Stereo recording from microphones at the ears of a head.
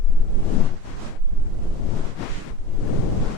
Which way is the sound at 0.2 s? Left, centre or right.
Left.